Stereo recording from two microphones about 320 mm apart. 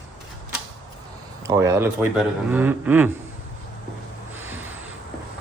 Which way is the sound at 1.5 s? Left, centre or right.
Centre.